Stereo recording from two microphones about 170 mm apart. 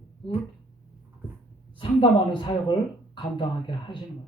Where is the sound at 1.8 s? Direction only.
25° left (ahead or behind).